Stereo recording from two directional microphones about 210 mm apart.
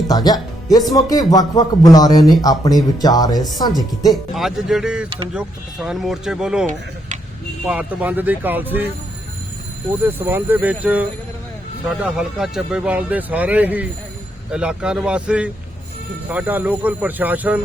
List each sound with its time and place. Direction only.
0.1 s speech: 20° left (ahead or behind)
4.1 s speech: centre (ahead or behind)
7.7 s speech: 5° right (ahead or behind)
10.0 s speech: 10° right (ahead or behind)